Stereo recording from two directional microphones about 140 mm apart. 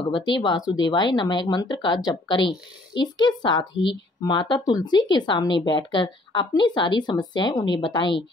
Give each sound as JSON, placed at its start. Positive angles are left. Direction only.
{"t": 0.1, "sound": "speech", "side_deg": 30}